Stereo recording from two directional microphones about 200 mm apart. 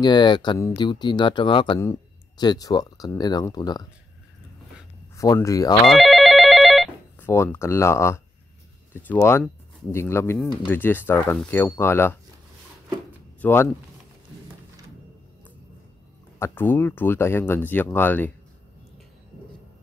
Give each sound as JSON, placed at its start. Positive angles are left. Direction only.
{"t": 0.0, "sound": "speech", "side_deg": 20}
{"t": 5.1, "sound": "speech", "side_deg": 15}
{"t": 5.9, "sound": "telephone bell ringing", "side_deg": 0}
{"t": 7.2, "sound": "speech", "side_deg": 10}
{"t": 13.4, "sound": "speech", "side_deg": 10}
{"t": 16.3, "sound": "speech", "side_deg": 10}